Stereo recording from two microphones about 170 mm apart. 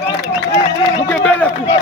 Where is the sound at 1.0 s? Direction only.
10° left (ahead or behind).